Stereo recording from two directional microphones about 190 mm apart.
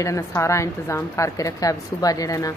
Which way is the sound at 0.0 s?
15° left (ahead or behind).